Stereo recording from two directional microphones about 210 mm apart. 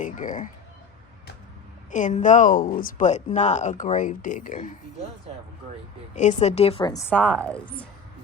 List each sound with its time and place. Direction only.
0.0 s speech: 40° left (ahead or behind)
1.9 s speech: 35° left (ahead or behind)
6.1 s a woman's voice: 35° left (ahead or behind)
7.1 s speech: 5° left (ahead or behind)